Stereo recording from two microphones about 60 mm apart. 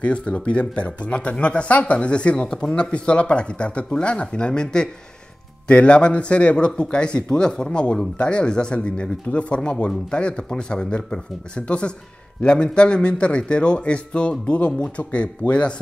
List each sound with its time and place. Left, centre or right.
0.0 s a man's voice: centre